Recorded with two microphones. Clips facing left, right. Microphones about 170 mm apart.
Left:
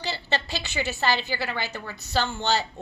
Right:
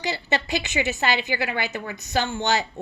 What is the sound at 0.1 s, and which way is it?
A woman's voice, 20° right (ahead or behind).